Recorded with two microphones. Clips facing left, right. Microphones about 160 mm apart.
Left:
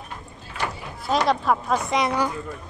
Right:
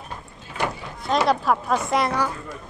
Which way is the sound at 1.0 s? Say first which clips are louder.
Right 1 dB; centre (ahead or behind).